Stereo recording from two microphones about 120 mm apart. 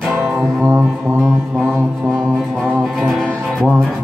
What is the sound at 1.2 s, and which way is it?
Mantra, centre (ahead or behind).